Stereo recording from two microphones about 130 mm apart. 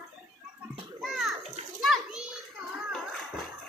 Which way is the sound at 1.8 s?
Centre (ahead or behind).